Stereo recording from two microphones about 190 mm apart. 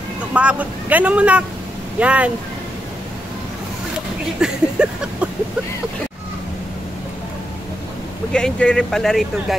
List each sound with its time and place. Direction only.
0.3 s speech: 5° right (ahead or behind)
4.4 s a sound: 5° right (ahead or behind)
8.3 s speech: 5° left (ahead or behind)